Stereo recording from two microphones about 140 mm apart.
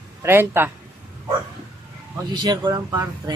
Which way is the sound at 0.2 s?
15° right (ahead or behind).